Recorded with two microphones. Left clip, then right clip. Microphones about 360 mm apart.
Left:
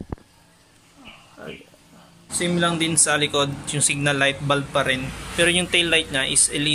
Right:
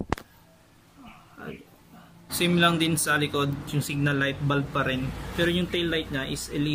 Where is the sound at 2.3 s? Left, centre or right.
Centre.